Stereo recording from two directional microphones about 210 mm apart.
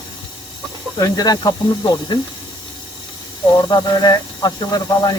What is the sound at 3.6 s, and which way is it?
Speech, 20° left (ahead or behind).